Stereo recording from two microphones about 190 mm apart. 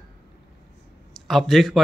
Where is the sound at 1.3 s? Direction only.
Centre (ahead or behind).